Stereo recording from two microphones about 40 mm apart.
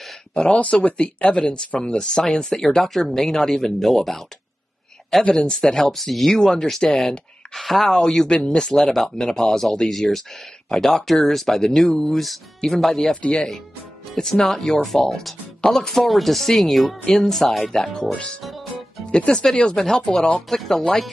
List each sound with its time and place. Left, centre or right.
0.3 s speech: left; by 4.2 s centre
5.3 s speech: centre
5.9 s speech: centre
7.5 s speech: centre
14.1 s speech: centre
18.1 s speech: left
18.4 s music: centre
19.1 s speech: left
20.3 s speech: centre